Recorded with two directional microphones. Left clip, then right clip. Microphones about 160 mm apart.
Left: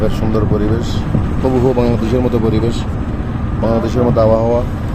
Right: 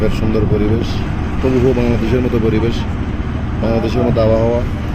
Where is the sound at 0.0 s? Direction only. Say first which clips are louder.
Even; 15° left (ahead or behind).